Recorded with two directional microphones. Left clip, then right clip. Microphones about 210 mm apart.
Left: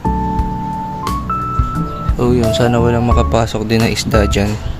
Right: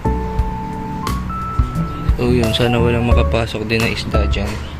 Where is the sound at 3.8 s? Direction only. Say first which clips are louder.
Left 5 dB; 35° left (ahead or behind).